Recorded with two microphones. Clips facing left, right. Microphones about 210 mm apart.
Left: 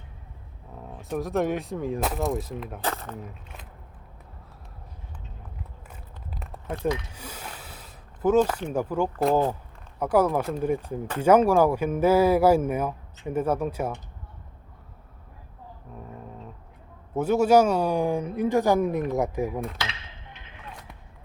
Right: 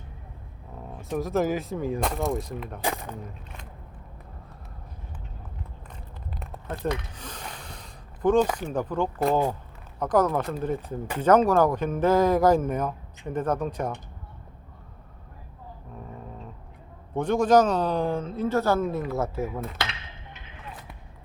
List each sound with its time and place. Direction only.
0.9 s speech: centre (ahead or behind)
2.8 s speech: 15° right (ahead or behind)
3.2 s a sound: 5° left (ahead or behind)
6.4 s a sound: centre (ahead or behind)
8.7 s speech: 10° left (ahead or behind)
17.2 s speech: 5° left (ahead or behind)